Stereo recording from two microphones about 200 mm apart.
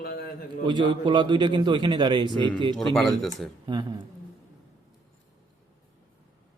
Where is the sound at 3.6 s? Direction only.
20° right (ahead or behind).